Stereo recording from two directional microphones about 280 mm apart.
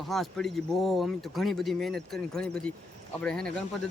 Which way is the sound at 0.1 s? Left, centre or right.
Centre.